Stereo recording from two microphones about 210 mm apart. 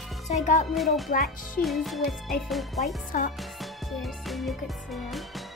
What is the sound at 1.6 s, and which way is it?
Speech, centre (ahead or behind).